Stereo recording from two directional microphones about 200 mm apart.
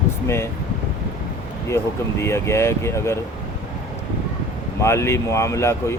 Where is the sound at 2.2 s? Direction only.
15° left (ahead or behind).